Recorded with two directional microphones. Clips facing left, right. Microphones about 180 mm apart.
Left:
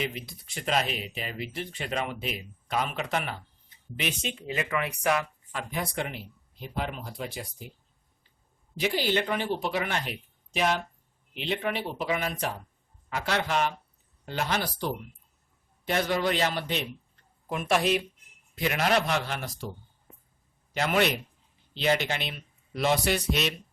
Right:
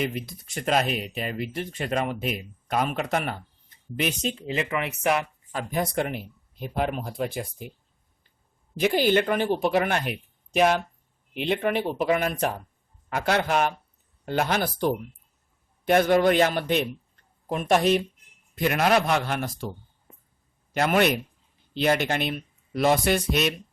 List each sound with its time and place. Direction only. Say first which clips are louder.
0.0 s speech: right 5 dB; 45° right (ahead or behind); by 5.1 s 25° right (ahead or behind)
5.5 s speech: right 5 dB; 40° right (ahead or behind)
8.7 s speech: right 6 dB; 50° right (ahead or behind)
17.5 s speech: right 4 dB; 40° right (ahead or behind)
20.7 s speech: right 4 dB; 50° right (ahead or behind)